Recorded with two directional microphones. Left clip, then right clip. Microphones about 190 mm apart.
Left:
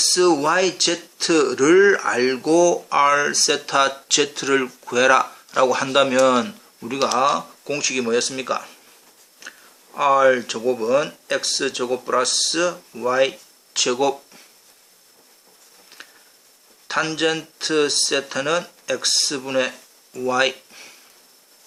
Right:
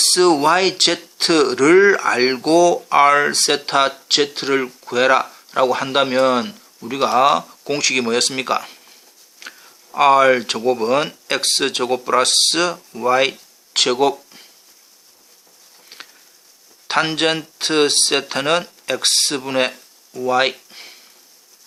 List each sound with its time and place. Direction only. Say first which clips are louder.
0.0 s speech: right 3 dB; 25° right (ahead or behind)
16.8 s speech: right 3 dB; 30° right (ahead or behind)